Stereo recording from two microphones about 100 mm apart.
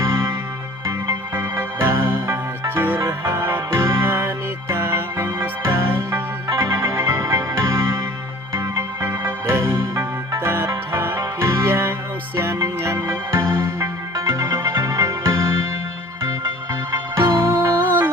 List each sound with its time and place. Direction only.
0.0 s music: 30° right (ahead or behind)
1.4 s music: 25° right (ahead or behind)
3.0 s music: 30° right (ahead or behind)
16.9 s music: 30° right (ahead or behind)